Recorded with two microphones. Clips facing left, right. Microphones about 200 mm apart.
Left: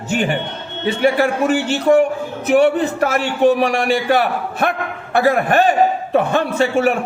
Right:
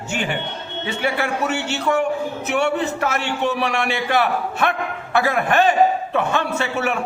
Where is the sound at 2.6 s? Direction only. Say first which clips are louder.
Left 5 dB; 40° left (ahead or behind).